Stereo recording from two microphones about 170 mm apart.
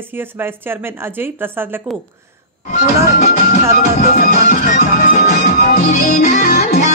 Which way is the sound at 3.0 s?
65° left (ahead or behind).